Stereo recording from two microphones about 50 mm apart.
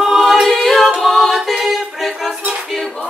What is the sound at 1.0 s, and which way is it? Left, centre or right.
Music, centre.